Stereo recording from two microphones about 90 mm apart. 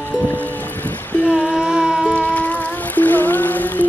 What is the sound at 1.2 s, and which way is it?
Music, 10° right (ahead or behind).